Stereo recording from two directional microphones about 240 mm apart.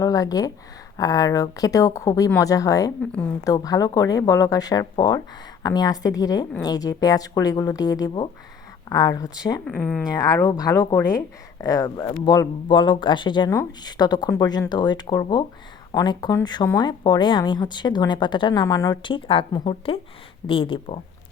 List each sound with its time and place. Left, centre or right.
0.0 s speech: centre
9.6 s a woman's voice: centre
10.1 s speech: centre